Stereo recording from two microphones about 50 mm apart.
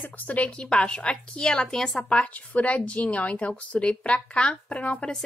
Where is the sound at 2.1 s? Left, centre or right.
Left.